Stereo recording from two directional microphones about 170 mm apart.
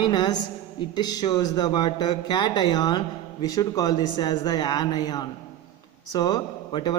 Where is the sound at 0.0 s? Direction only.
25° left (ahead or behind).